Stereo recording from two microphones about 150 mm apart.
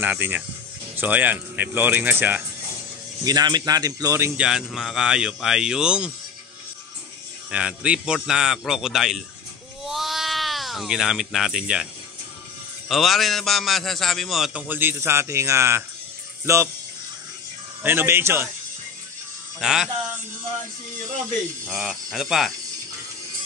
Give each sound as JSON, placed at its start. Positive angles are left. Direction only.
{"t": 0.0, "sound": "speech", "side_deg": -10}
{"t": 3.3, "sound": "speech", "side_deg": -25}
{"t": 4.4, "sound": "speech", "side_deg": -5}
{"t": 7.5, "sound": "speech", "side_deg": -5}
{"t": 9.8, "sound": "a sound", "side_deg": 0}
{"t": 12.8, "sound": "speech", "side_deg": 0}
{"t": 14.7, "sound": "speech", "side_deg": -15}
{"t": 17.8, "sound": "speech", "side_deg": -15}
{"t": 19.6, "sound": "speech", "side_deg": -5}
{"t": 21.6, "sound": "speech", "side_deg": 0}